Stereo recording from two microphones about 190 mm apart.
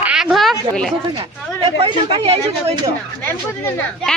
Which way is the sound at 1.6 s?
30° right (ahead or behind).